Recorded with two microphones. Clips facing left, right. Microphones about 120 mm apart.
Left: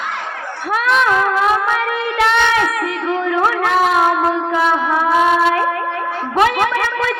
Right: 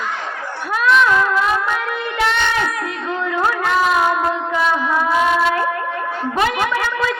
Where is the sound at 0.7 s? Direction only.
60° left (ahead or behind).